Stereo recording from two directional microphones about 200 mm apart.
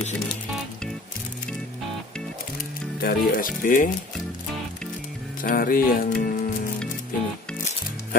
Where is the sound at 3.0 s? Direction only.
45° left (ahead or behind).